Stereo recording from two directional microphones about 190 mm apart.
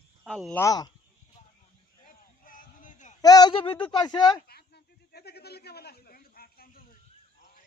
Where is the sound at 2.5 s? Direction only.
45° left (ahead or behind).